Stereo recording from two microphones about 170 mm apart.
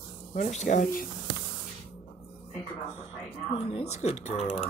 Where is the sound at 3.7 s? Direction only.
35° left (ahead or behind).